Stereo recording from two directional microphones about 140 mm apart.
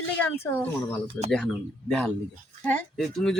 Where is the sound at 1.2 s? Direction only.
15° left (ahead or behind).